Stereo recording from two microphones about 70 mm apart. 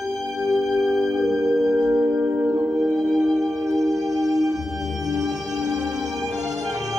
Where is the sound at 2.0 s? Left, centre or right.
Right.